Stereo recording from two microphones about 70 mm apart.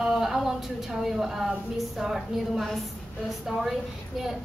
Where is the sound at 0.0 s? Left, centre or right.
Centre.